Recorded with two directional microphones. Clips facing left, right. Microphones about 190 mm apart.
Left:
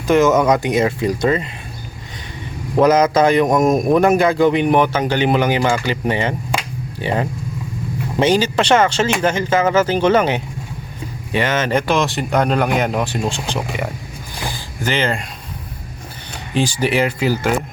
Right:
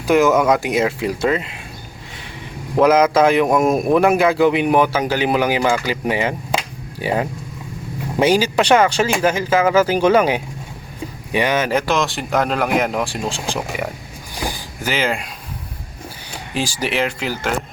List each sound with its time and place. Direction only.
0.1 s speech: centre (ahead or behind)
2.7 s speech: 5° right (ahead or behind)
14.3 s a sound: 15° right (ahead or behind)
16.6 s speech: centre (ahead or behind)